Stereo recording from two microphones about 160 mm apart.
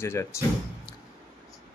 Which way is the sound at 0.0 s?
15° left (ahead or behind).